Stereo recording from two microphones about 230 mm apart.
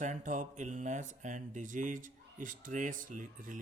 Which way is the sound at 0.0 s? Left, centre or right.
Right.